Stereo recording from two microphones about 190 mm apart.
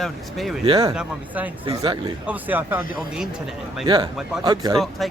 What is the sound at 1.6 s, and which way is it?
Speech, 25° right (ahead or behind).